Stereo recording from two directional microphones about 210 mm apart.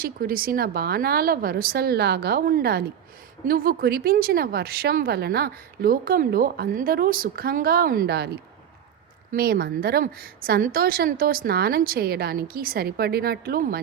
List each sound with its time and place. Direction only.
0.0 s speech: 45° right (ahead or behind)
9.3 s speech: 45° right (ahead or behind)